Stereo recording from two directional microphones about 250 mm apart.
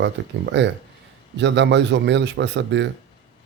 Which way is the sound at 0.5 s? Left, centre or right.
Right.